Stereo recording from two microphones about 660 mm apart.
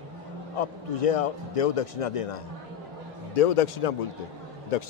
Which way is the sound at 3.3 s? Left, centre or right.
Left.